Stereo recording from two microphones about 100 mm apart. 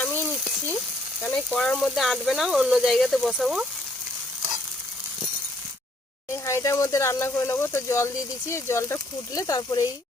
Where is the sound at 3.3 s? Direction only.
10° right (ahead or behind).